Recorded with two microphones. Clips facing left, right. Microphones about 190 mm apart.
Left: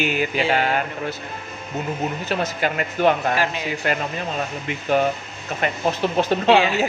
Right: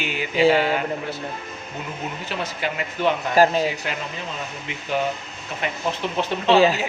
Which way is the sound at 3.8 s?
55° left (ahead or behind).